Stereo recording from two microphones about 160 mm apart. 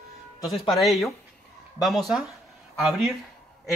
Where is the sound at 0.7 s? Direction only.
Centre (ahead or behind).